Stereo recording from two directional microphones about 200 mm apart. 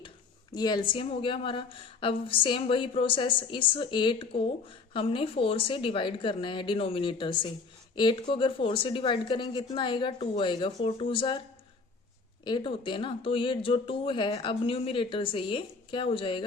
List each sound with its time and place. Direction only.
0.5 s speech: 20° left (ahead or behind)
12.5 s speech: 25° left (ahead or behind)